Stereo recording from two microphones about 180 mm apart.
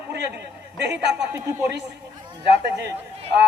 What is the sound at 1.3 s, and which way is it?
Speech, 20° right (ahead or behind).